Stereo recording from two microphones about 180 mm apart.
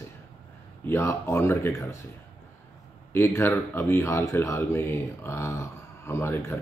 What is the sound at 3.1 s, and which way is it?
Speech, 10° left (ahead or behind).